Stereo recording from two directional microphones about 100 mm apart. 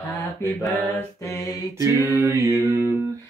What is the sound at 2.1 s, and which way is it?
Music, 30° right (ahead or behind).